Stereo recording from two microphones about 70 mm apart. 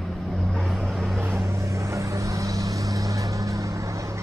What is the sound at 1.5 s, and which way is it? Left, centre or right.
Vehicle, right.